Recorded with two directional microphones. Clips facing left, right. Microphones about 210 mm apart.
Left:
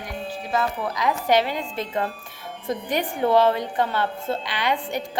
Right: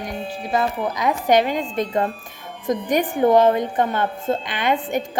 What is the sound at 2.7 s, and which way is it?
Speech, 45° right (ahead or behind).